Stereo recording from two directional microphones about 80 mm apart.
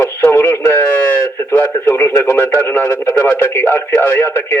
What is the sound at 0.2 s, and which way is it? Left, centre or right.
A man's voice, left.